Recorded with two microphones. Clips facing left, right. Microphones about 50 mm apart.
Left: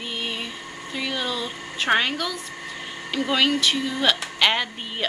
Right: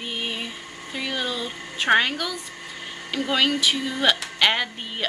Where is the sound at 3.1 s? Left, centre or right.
Centre.